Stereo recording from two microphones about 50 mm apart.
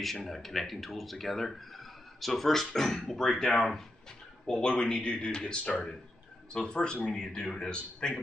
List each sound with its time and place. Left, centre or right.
0.0 s speech: centre
4.5 s a man's voice: centre